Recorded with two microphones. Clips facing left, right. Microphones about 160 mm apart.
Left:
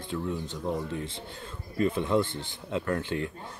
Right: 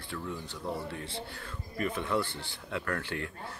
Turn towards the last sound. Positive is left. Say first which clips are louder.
# left 5 dB
turn(degrees=20)  # may be behind; listen again after turning